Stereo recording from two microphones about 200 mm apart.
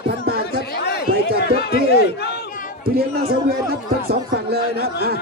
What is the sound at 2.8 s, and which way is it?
Speech, 50° right (ahead or behind).